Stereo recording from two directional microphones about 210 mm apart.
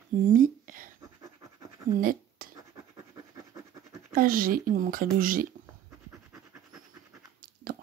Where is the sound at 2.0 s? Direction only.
40° right (ahead or behind).